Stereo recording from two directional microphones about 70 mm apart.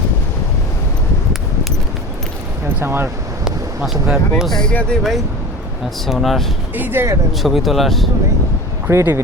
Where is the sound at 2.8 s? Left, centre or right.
Right.